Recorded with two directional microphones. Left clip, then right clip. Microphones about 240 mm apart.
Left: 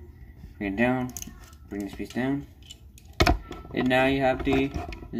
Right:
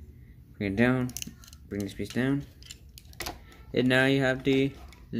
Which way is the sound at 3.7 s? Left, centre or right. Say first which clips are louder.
Left 1 dB; right.